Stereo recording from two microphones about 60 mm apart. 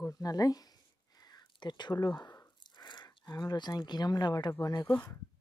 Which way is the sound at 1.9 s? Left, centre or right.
Left.